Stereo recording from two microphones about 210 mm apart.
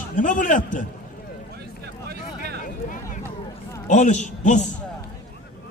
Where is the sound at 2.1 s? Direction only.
50° right (ahead or behind).